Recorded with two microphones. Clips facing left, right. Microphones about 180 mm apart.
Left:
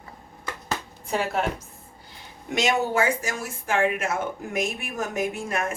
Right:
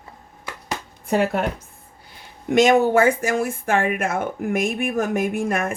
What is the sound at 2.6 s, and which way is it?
Speech, 50° right (ahead or behind).